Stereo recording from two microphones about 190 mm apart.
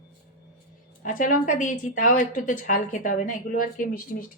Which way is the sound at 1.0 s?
45° left (ahead or behind).